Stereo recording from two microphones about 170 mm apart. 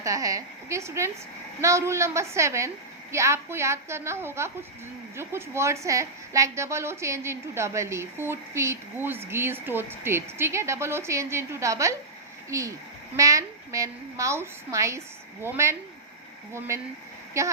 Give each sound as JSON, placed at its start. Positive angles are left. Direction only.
{"t": 0.0, "sound": "a woman's voice", "side_deg": -20}